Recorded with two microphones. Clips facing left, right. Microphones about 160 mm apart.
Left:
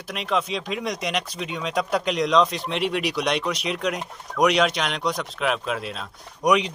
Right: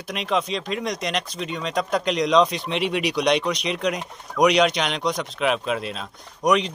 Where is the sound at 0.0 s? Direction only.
Centre (ahead or behind).